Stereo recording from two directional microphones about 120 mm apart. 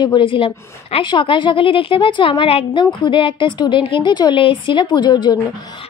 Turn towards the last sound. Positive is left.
turn(degrees=40)  # may be behind; listen again after turning